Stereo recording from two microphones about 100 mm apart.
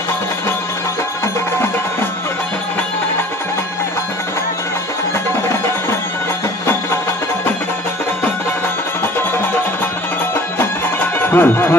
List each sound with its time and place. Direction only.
11.1 s speech: 20° left (ahead or behind)